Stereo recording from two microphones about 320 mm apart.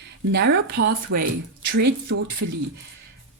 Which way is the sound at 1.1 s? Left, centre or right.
Right.